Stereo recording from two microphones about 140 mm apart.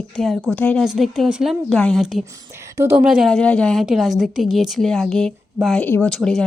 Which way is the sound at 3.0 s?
5° right (ahead or behind).